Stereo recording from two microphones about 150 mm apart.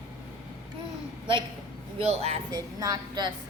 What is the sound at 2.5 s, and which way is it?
Speech, 25° right (ahead or behind).